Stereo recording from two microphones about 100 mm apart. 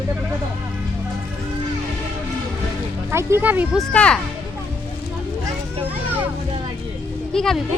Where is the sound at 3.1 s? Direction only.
20° right (ahead or behind).